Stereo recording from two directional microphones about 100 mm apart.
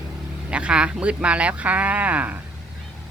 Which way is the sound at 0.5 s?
10° right (ahead or behind).